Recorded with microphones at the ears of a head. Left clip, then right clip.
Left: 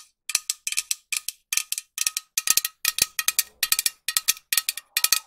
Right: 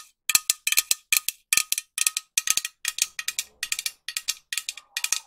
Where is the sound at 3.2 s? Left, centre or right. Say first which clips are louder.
Left 5 dB; left.